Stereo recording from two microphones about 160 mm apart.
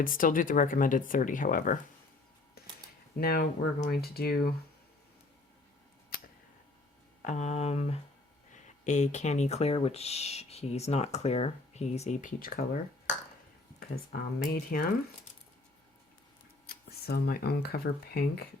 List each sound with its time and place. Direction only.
0.0 s speech: 60° left (ahead or behind)
3.2 s speech: 75° left (ahead or behind)
7.2 s speech: 50° left (ahead or behind)
13.7 s speech: 75° left (ahead or behind)
16.6 s speech: 75° left (ahead or behind)